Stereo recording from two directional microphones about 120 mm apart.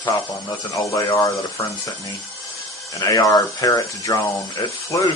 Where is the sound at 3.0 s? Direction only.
30° left (ahead or behind).